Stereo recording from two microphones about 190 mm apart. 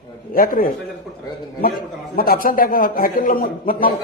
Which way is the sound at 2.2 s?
50° left (ahead or behind).